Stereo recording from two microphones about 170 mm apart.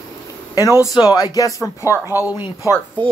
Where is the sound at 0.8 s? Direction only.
20° left (ahead or behind).